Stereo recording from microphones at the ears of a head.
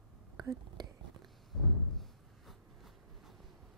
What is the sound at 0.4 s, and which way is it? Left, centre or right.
Whispering, right.